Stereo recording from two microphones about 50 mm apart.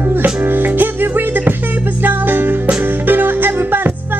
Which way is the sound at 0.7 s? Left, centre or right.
Right.